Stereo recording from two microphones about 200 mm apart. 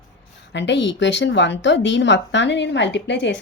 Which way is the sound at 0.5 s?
60° left (ahead or behind).